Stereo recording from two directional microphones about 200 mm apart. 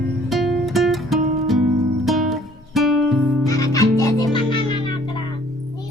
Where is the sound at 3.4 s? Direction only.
15° left (ahead or behind).